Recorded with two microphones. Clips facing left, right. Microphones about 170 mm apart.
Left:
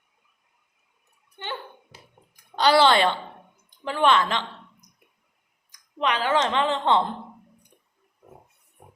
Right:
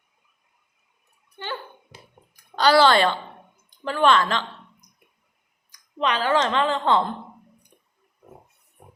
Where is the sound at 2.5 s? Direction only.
20° left (ahead or behind).